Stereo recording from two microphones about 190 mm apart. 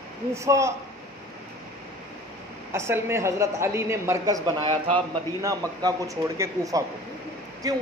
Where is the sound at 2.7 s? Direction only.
15° right (ahead or behind).